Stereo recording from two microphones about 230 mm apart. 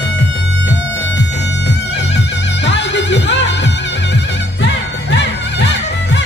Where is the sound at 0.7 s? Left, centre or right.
Left.